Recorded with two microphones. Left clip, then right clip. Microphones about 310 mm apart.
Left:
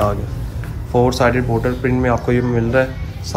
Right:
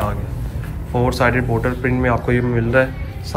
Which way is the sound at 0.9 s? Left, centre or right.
Centre.